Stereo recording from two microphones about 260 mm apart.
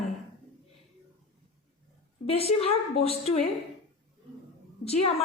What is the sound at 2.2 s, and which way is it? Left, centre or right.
A woman's voice, left.